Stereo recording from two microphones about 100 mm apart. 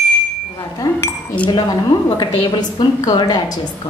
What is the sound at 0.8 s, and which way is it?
Dishes, 45° left (ahead or behind).